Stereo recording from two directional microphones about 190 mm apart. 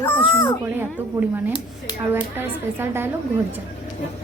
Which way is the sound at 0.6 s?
10° right (ahead or behind).